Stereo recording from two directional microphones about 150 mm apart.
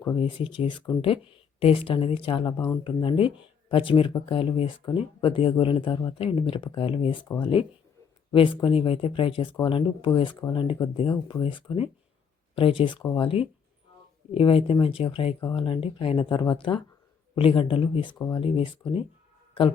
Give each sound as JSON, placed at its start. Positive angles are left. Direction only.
{"t": 0.2, "sound": "speech", "side_deg": 35}